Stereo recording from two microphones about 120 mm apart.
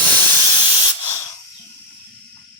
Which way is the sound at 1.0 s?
20° left (ahead or behind).